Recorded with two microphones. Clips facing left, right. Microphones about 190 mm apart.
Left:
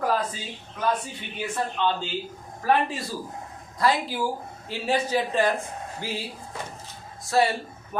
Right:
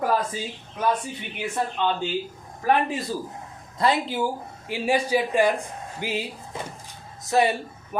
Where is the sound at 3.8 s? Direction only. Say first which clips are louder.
Right 1 dB; 20° right (ahead or behind).